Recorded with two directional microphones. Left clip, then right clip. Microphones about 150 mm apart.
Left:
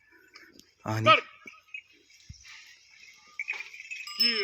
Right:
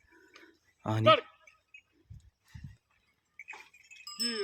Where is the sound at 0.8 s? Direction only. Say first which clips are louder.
Left 1 dB; 15° right (ahead or behind).